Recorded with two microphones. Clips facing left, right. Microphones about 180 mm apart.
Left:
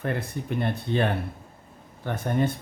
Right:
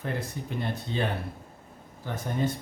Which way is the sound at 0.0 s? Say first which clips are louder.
Left 4 dB; 60° left (ahead or behind).